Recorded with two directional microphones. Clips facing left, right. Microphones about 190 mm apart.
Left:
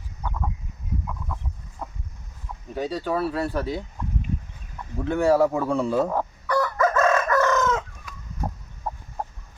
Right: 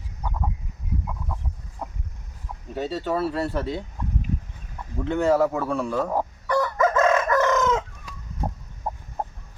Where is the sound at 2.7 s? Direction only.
Centre (ahead or behind).